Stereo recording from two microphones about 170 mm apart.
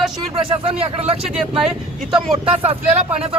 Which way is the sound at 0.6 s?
35° right (ahead or behind).